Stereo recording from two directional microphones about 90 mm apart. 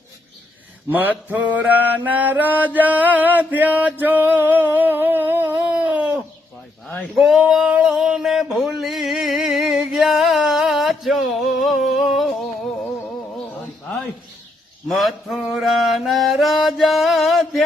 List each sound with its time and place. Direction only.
0.9 s mantra: 20° right (ahead or behind)
4.0 s a sound: 20° right (ahead or behind)
7.0 s male singing: 5° right (ahead or behind)
14.8 s mantra: centre (ahead or behind)